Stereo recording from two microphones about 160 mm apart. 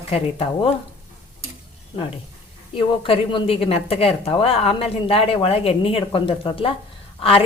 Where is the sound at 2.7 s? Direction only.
35° left (ahead or behind).